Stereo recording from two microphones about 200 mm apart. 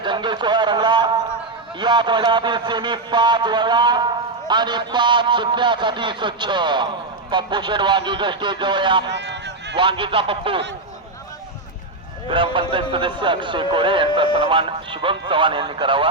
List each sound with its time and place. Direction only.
0.0 s a sound: 25° right (ahead or behind)
1.8 s a man's voice: 20° right (ahead or behind)
9.0 s run: 60° right (ahead or behind)
9.7 s a man's voice: 25° right (ahead or behind)
12.3 s a man's voice: 25° right (ahead or behind)